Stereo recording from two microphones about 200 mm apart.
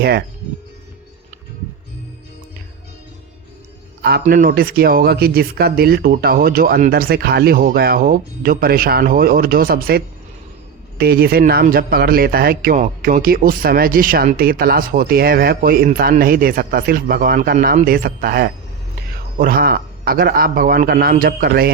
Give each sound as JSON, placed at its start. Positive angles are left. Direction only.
{"t": 0.0, "sound": "a man's voice", "side_deg": -50}
{"t": 4.2, "sound": "a man's voice", "side_deg": -40}